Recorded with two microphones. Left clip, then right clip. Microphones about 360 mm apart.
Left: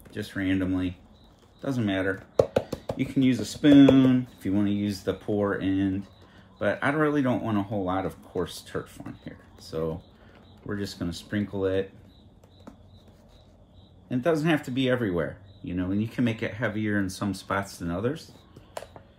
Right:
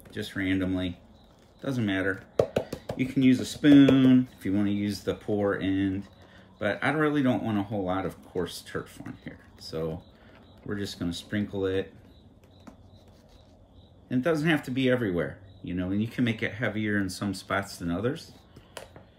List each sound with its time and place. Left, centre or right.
0.1 s speech: centre
14.0 s speech: centre
18.8 s a sound: centre